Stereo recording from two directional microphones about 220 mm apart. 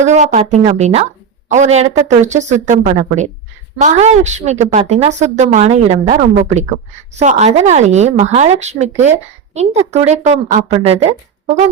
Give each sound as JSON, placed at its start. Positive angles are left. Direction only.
{"t": 0.0, "sound": "a woman's voice", "side_deg": -30}